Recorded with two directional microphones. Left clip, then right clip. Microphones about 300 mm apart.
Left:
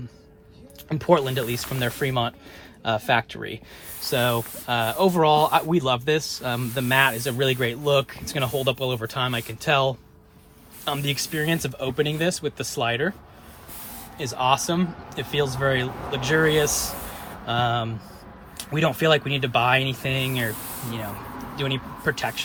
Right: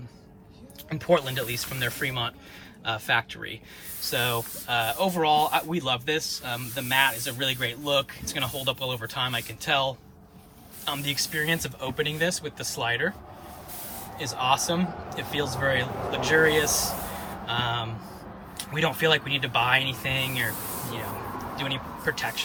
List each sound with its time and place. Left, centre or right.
0.9 s speech: centre
14.2 s speech: centre
21.5 s speech: centre